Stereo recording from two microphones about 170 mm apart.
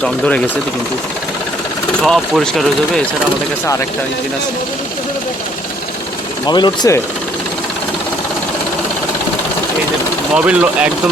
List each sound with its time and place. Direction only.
0.0 s speech: 5° left (ahead or behind)
2.0 s speech: 5° left (ahead or behind)
6.5 s speech: 25° left (ahead or behind)
10.3 s speech: 5° right (ahead or behind)